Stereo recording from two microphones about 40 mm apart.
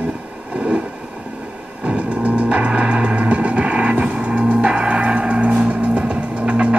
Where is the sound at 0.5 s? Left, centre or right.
Right.